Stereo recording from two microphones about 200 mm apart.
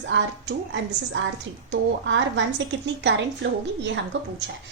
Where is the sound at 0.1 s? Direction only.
65° right (ahead or behind).